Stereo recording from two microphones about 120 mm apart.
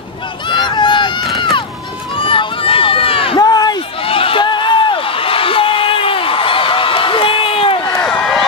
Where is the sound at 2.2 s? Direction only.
50° left (ahead or behind).